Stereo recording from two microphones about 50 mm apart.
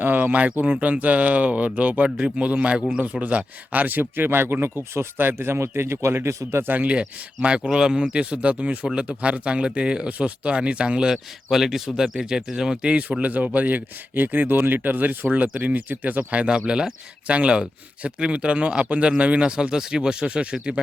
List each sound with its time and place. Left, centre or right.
0.0 s a man's voice: right
7.4 s speech: centre